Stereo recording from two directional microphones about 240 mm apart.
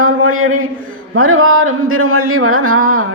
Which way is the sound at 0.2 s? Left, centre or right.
Right.